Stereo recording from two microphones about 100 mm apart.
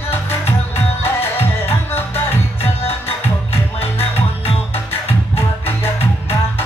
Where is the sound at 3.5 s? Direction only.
85° left.